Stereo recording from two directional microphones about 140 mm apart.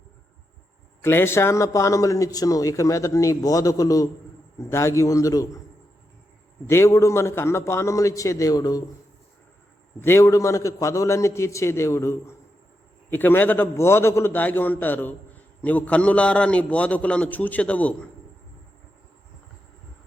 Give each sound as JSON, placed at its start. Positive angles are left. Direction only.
{"t": 1.0, "sound": "a man's voice", "side_deg": 15}
{"t": 6.7, "sound": "a man's voice", "side_deg": 20}
{"t": 10.0, "sound": "a man's voice", "side_deg": 20}